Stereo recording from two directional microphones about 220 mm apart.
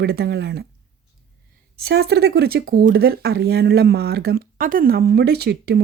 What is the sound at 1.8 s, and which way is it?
A woman's voice, 50° right (ahead or behind).